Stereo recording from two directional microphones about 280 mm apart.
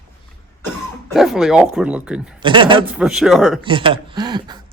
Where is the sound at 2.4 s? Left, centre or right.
Centre.